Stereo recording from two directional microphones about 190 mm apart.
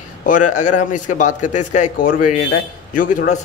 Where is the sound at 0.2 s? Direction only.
45° left (ahead or behind).